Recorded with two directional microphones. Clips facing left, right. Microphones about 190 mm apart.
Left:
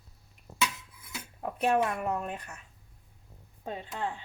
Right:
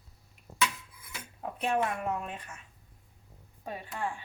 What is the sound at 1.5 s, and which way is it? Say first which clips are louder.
A woman's voice: left 3 dB; 45° left (ahead or behind).